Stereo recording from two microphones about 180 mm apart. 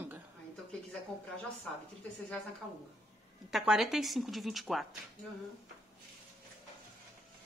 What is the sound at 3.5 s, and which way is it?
Speech, centre (ahead or behind).